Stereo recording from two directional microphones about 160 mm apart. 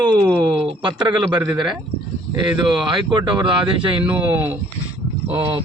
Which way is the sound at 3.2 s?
30° right (ahead or behind).